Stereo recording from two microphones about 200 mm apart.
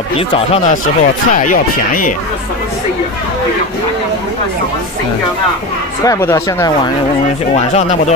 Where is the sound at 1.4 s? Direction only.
40° left (ahead or behind).